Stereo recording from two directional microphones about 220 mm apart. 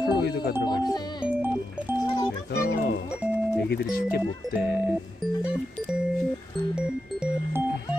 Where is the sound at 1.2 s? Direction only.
10° right (ahead or behind).